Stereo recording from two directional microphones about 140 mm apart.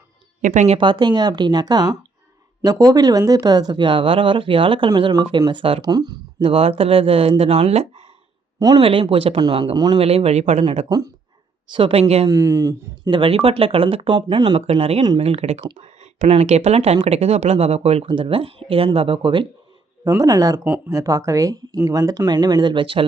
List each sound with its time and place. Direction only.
0.4 s a woman's voice: 60° right (ahead or behind)
0.8 s speech: 35° right (ahead or behind)
8.5 s speech: 25° right (ahead or behind)
8.8 s speech: 40° right (ahead or behind)
10.0 s speech: 45° right (ahead or behind)
10.8 s speech: 25° right (ahead or behind)
11.7 s speech: 40° right (ahead or behind)
12.3 s speech: 20° right (ahead or behind)
13.1 s speech: 40° right (ahead or behind)
20.1 s speech: 25° right (ahead or behind)